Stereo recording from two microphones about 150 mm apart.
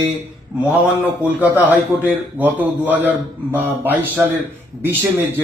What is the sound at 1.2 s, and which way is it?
A man's voice, 10° right (ahead or behind).